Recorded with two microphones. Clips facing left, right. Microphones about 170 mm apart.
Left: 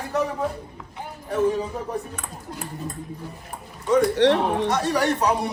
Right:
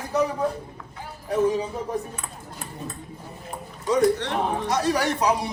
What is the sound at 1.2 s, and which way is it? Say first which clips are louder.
Speech: even; centre (ahead or behind).